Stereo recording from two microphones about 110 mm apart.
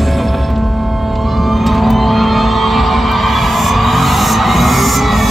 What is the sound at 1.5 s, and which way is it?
Vehicle, centre (ahead or behind).